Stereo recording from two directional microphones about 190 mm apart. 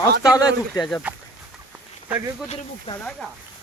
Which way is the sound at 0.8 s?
5° left (ahead or behind).